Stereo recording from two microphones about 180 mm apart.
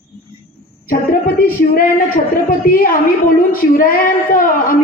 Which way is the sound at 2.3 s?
50° left (ahead or behind).